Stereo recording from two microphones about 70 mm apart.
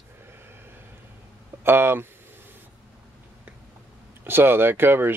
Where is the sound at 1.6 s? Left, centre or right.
Right.